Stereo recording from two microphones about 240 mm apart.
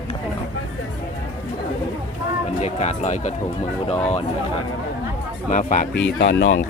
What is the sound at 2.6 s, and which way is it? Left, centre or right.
Speech, left.